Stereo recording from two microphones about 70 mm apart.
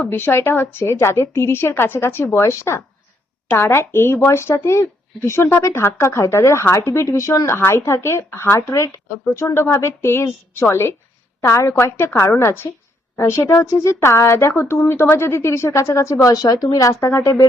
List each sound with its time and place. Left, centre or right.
0.1 s speech: left
11.9 s speech: left